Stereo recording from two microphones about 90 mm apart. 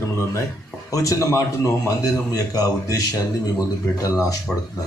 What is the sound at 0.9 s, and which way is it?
A man's voice, 35° left (ahead or behind).